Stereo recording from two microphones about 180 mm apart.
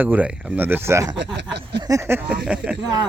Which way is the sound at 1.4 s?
70° right (ahead or behind).